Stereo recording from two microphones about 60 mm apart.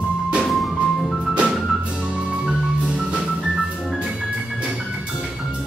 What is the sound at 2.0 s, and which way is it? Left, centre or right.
Music, centre.